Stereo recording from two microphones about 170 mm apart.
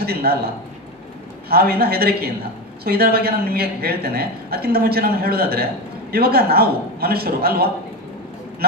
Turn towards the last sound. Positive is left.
turn(degrees=-65)  # may be behind; listen again after turning